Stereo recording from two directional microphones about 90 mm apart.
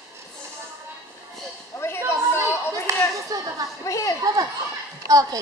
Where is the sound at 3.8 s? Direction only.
35° left (ahead or behind).